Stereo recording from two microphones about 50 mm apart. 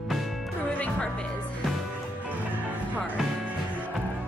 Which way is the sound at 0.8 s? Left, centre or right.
Left.